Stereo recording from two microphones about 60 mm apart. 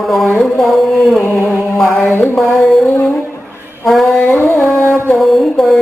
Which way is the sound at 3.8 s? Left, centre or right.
Centre.